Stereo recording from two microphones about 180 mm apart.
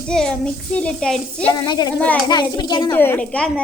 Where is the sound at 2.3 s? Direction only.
25° left (ahead or behind).